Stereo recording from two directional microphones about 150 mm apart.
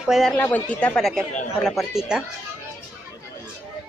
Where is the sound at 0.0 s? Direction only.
Centre (ahead or behind).